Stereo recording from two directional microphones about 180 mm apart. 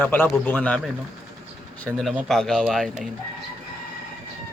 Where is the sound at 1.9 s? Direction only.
Centre (ahead or behind).